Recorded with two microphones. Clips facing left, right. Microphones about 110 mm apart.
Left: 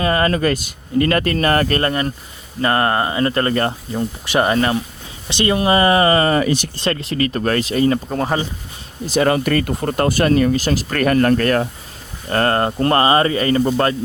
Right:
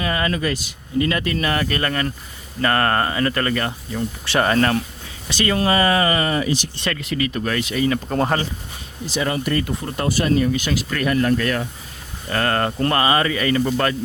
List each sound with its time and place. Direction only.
0.0 s speech: 45° left (ahead or behind)
1.8 s speech: 25° left (ahead or behind)
4.3 s speech: 20° left (ahead or behind); by 6.3 s 35° left (ahead or behind)
6.3 s speech: 55° left (ahead or behind)
6.7 s speech: 30° left (ahead or behind)
8.0 s speech: centre (ahead or behind)
9.0 s speech: 55° left (ahead or behind)
10.5 s speech: 40° left (ahead or behind)
12.3 s speech: 35° left (ahead or behind)